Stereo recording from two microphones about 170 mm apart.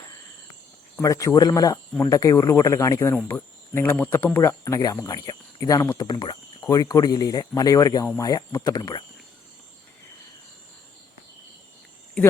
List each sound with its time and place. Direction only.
1.0 s speech: 20° left (ahead or behind)